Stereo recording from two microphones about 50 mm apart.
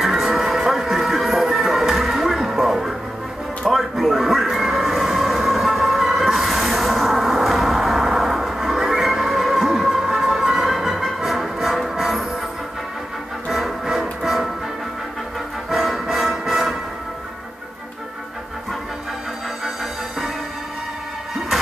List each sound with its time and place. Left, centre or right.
0.0 s music: centre
3.7 s train: centre
13.5 s music: centre
15.7 s music: centre